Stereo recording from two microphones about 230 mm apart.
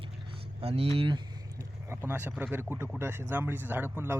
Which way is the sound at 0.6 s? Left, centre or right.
Right.